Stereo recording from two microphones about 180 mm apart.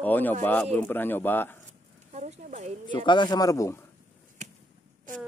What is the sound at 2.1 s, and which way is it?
Speech, 40° right (ahead or behind).